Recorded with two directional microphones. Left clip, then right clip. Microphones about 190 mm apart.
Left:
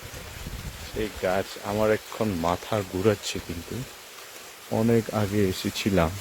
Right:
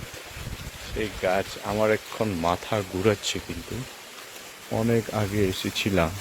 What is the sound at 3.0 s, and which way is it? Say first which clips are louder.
Speech: right 1 dB; 20° left (ahead or behind).